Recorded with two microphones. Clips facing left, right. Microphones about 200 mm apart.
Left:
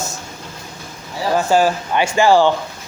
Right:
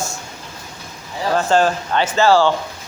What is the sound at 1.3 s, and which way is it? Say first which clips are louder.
Speech: left 1 dB; 10° left (ahead or behind).